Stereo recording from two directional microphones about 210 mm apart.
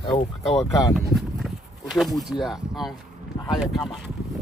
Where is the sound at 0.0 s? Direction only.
25° left (ahead or behind).